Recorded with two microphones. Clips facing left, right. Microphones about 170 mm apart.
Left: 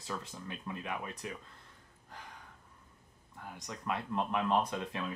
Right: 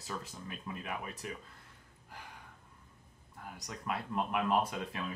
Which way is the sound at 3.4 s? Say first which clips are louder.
Left 1 dB; 5° right (ahead or behind).